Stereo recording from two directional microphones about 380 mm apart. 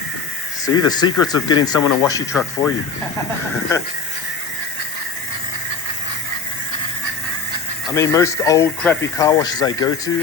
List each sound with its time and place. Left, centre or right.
0.6 s speech: centre
7.9 s speech: centre